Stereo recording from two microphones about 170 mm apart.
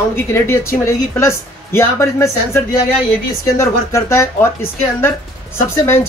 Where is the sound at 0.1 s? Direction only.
15° left (ahead or behind).